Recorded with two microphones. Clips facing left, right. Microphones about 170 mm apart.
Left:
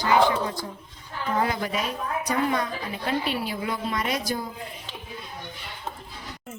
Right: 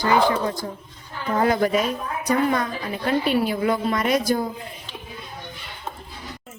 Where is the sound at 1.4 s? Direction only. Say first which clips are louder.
Right 8 dB; 50° right (ahead or behind).